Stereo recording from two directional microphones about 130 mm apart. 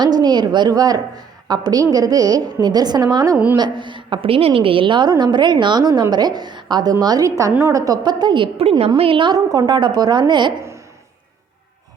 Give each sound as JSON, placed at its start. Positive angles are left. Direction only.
{"t": 0.0, "sound": "a woman's voice", "side_deg": -35}
{"t": 3.3, "sound": "a woman's voice", "side_deg": -15}
{"t": 3.6, "sound": "a woman's voice", "side_deg": -35}